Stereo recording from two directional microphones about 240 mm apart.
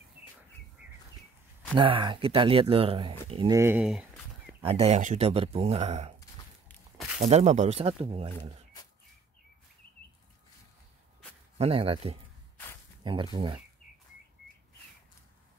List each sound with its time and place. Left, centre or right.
1.8 s speech: right
3.5 s chicken: centre
4.6 s speech: right
6.7 s walk: centre
7.2 s speech: right
11.5 s speech: right